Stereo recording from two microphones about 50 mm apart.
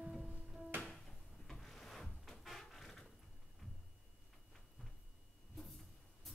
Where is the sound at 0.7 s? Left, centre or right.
Right.